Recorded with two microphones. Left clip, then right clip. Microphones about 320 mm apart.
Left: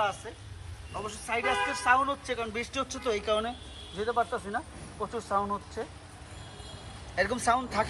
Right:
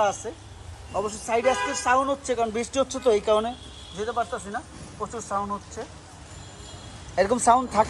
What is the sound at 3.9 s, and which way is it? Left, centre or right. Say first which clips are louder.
Speech: right 1 dB; centre.